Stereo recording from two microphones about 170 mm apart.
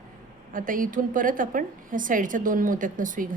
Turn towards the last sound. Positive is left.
turn(degrees=-50)  # may be behind; listen again after turning